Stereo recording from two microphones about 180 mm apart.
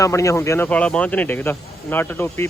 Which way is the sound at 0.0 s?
15° left (ahead or behind).